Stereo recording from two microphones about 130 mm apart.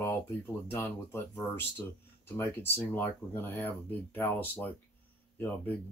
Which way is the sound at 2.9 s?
15° left (ahead or behind).